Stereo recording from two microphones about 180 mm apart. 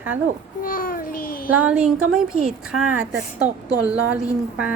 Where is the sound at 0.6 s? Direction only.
50° left (ahead or behind).